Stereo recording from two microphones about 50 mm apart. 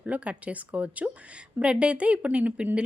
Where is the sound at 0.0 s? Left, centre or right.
Right.